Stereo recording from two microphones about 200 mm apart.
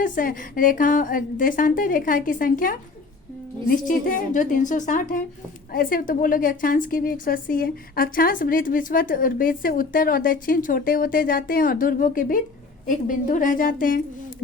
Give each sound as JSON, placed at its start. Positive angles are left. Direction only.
{"t": 0.0, "sound": "a woman's voice", "side_deg": 45}